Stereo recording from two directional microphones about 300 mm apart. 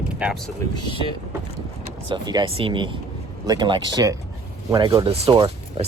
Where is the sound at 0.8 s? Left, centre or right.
Centre.